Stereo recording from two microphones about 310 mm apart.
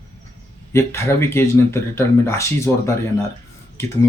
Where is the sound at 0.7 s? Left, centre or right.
Centre.